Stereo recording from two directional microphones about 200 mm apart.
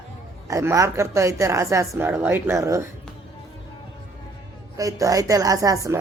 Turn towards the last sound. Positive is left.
turn(degrees=-15)  # may be behind; listen again after turning